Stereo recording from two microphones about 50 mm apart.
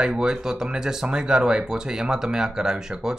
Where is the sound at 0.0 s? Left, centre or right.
Centre.